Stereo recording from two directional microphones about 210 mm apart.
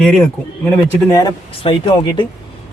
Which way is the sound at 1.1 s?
20° left (ahead or behind).